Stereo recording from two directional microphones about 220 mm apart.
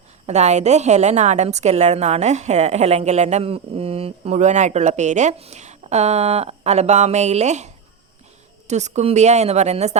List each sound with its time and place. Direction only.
0.3 s a woman's voice: 30° right (ahead or behind)